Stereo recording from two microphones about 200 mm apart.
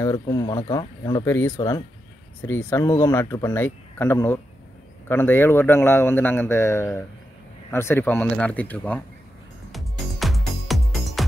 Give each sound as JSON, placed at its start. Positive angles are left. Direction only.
{"t": 0.0, "sound": "a man's voice", "side_deg": 20}
{"t": 9.7, "sound": "music", "side_deg": 0}